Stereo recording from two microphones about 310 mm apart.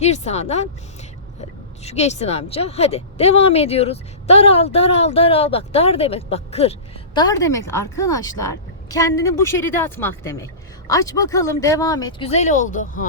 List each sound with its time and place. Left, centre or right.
0.0 s a woman's voice: left
1.8 s a woman's voice: left